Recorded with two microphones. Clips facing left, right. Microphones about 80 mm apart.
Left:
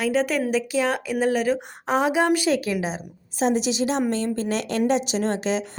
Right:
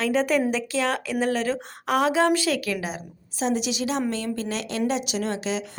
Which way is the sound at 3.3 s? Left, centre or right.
Left.